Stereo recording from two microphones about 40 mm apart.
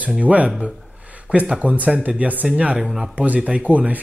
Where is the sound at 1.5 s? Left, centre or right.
Right.